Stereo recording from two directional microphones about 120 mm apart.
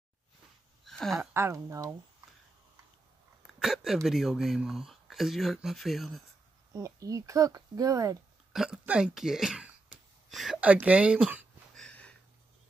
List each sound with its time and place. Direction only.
0.8 s a sound: centre (ahead or behind)
1.3 s speech: 25° right (ahead or behind)
3.4 s speech: centre (ahead or behind)
6.7 s speech: 30° right (ahead or behind)
8.5 s speech: 5° right (ahead or behind)
11.7 s sniff: 10° left (ahead or behind)